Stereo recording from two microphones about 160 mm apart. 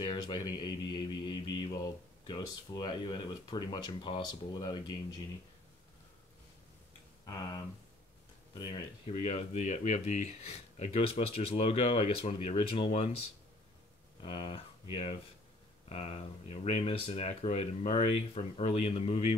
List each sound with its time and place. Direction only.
0.0 s speech: 30° left (ahead or behind)
7.2 s speech: 25° left (ahead or behind)
9.2 s speech: 40° left (ahead or behind)
14.2 s speech: 30° left (ahead or behind)